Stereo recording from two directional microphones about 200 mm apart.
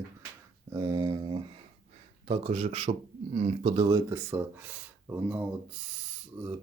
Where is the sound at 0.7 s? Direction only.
20° right (ahead or behind).